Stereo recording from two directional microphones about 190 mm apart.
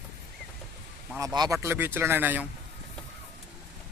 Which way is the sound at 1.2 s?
20° right (ahead or behind).